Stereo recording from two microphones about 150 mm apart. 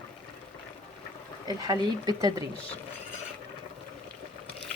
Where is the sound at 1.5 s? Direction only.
25° right (ahead or behind).